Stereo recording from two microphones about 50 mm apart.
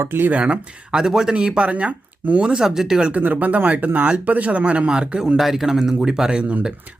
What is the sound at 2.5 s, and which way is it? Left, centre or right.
Speech, centre.